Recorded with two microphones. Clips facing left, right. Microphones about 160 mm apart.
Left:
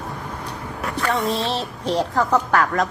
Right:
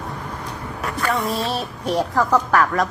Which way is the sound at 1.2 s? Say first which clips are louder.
Left 1 dB; 30° left (ahead or behind).